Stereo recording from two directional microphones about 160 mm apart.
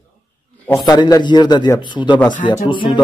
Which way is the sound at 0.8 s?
25° left (ahead or behind).